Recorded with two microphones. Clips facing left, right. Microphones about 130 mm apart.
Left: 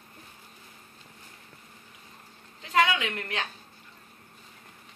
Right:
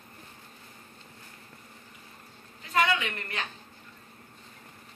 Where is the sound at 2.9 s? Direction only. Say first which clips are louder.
Left 3 dB; 90° left.